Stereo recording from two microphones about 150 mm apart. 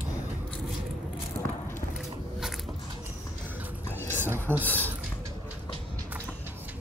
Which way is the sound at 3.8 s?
15° left (ahead or behind).